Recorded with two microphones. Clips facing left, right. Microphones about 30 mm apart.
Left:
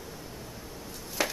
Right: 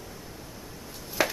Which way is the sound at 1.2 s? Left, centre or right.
Centre.